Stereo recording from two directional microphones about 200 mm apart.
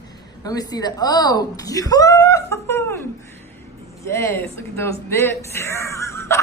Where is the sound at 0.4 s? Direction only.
20° left (ahead or behind).